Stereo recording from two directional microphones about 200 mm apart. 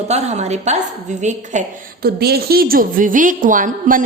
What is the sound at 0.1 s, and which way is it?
A woman's voice, 35° right (ahead or behind).